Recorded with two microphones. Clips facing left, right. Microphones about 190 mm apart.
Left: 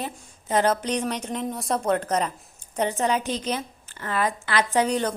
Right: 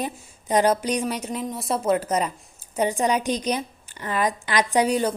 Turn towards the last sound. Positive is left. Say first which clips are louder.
# right 2 dB
turn(degrees=-10)  # may be behind; listen again after turning